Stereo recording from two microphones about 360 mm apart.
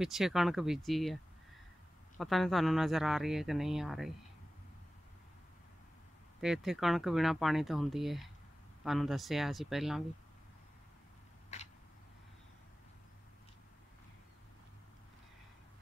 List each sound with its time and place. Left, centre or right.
0.0 s speech: centre
2.1 s speech: centre
6.4 s speech: centre
11.5 s a sound: centre